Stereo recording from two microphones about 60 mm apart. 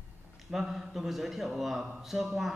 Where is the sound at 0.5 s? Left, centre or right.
Centre.